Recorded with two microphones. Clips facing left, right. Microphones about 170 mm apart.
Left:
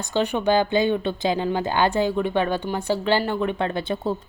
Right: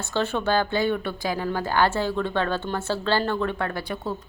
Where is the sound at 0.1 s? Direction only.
15° left (ahead or behind).